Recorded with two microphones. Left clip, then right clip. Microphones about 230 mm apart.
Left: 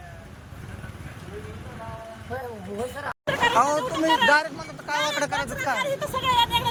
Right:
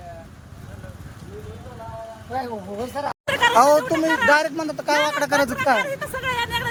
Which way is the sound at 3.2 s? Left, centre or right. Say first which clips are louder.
Right 5 dB; right.